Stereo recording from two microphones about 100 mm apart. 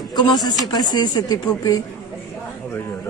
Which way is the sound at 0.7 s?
40° left (ahead or behind).